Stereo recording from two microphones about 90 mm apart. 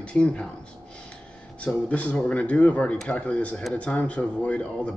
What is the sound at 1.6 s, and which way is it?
Speech, 10° left (ahead or behind).